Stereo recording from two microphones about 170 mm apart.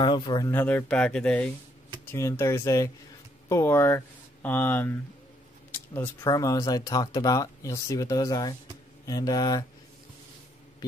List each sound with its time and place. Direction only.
0.0 s speech: 30° left (ahead or behind)
0.5 s speech: 10° left (ahead or behind)